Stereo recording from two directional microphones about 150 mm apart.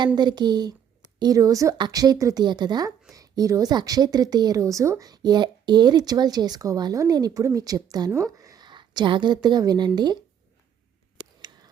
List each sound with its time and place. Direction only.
0.2 s a woman's voice: 30° right (ahead or behind)